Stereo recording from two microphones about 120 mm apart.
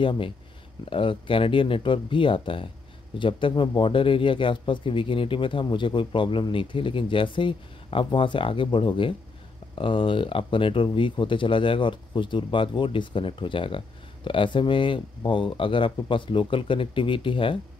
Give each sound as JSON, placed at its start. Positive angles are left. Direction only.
{"t": 0.0, "sound": "speech", "side_deg": 45}